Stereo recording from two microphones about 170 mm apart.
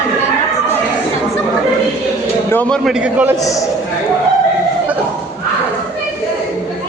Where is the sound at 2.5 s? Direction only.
10° left (ahead or behind); by 3.3 s 10° right (ahead or behind).